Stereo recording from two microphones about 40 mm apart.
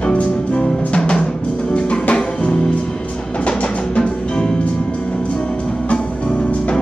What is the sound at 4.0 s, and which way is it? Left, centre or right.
Music, left.